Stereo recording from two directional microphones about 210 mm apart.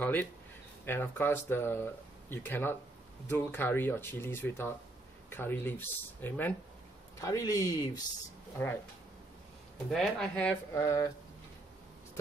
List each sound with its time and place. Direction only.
0.0 s speech: 10° left (ahead or behind)
9.8 s speech: centre (ahead or behind)